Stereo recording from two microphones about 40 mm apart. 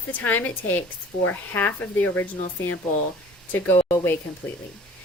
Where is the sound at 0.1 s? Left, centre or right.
Left.